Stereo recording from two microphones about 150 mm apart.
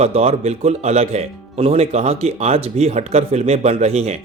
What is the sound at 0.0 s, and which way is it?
Speech, 45° right (ahead or behind).